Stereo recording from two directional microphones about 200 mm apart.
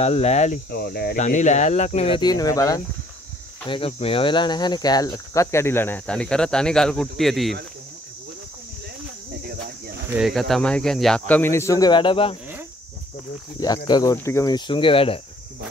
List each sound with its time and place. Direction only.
0.0 s speech: 30° left (ahead or behind)
0.7 s speech: 50° left (ahead or behind)
1.2 s speech: 35° left (ahead or behind); by 7.5 s centre (ahead or behind)
9.3 s cricket: 50° right (ahead or behind)
10.0 s speech: 5° right (ahead or behind); by 12.4 s 25° left (ahead or behind)
13.6 s speech: 20° left (ahead or behind)